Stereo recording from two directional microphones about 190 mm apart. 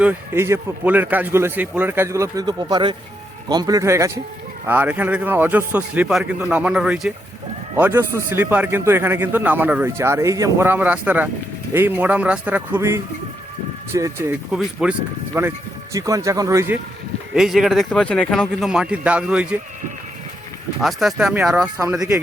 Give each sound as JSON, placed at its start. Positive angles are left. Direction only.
{"t": 0.0, "sound": "a man's voice", "side_deg": -10}
{"t": 14.5, "sound": "a man's voice", "side_deg": -5}
{"t": 17.3, "sound": "speech", "side_deg": 0}
{"t": 20.8, "sound": "speech", "side_deg": 0}